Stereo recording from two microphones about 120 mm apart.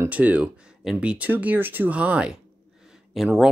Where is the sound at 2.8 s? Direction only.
5° right (ahead or behind).